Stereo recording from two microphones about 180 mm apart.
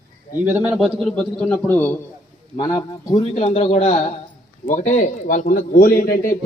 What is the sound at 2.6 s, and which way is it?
A man's voice, 20° left (ahead or behind).